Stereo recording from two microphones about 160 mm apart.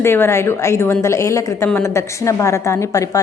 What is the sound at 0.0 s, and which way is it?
A woman's voice, 15° left (ahead or behind).